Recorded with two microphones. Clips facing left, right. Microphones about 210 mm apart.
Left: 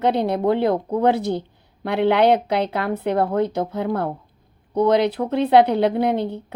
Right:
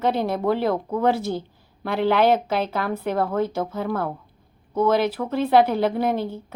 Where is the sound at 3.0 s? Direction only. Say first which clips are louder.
Left 4 dB; 20° left (ahead or behind).